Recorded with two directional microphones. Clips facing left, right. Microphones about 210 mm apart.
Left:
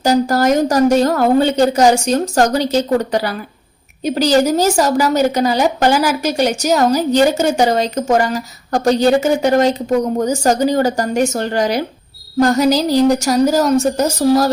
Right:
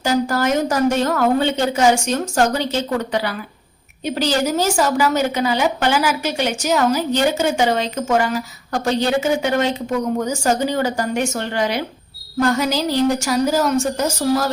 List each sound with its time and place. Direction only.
0.0 s a woman's voice: 40° left (ahead or behind)